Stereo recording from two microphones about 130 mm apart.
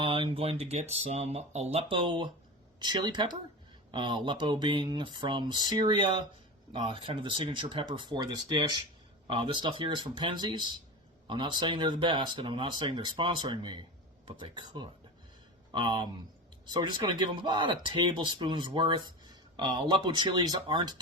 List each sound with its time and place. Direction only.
0.0 s speech: 50° right (ahead or behind)
1.9 s speech: 40° right (ahead or behind)